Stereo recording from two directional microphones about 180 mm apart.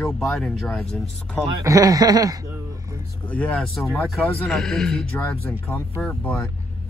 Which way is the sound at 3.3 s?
10° left (ahead or behind).